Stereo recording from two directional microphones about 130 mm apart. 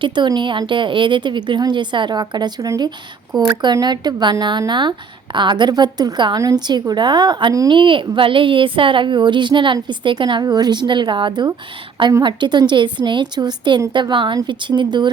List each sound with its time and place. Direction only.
0.0 s a woman's voice: 35° right (ahead or behind)